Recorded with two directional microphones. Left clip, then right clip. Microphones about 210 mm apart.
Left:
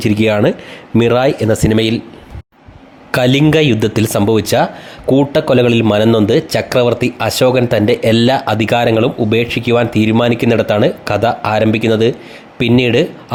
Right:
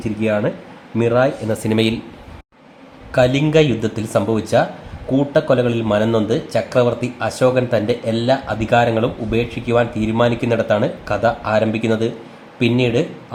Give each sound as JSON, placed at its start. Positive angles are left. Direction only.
{"t": 0.0, "sound": "a man's voice", "side_deg": 45}
{"t": 1.5, "sound": "speech", "side_deg": 30}
{"t": 3.1, "sound": "a man's voice", "side_deg": 40}